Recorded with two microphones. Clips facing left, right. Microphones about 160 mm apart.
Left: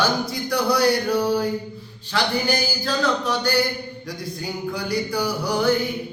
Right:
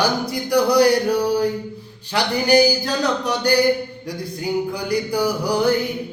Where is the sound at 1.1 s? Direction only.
15° right (ahead or behind).